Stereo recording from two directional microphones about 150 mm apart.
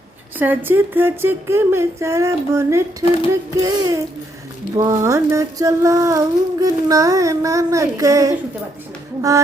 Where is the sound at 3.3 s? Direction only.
20° right (ahead or behind).